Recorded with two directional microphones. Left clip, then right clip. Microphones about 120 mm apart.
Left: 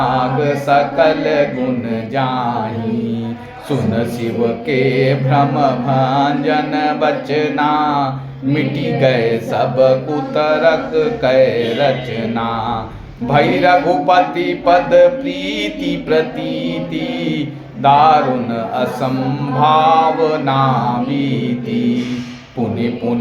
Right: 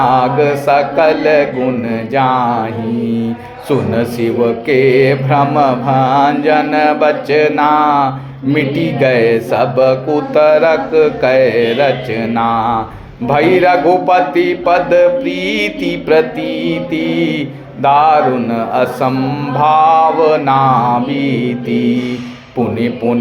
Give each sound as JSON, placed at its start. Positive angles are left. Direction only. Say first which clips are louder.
{"t": 0.0, "sound": "mantra", "louder": "right 5 dB", "side_deg": -40}
{"t": 3.7, "sound": "mantra", "louder": "right 4 dB", "side_deg": -40}